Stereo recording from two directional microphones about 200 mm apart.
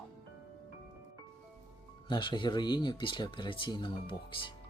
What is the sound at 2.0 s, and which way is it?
Speech, 25° left (ahead or behind).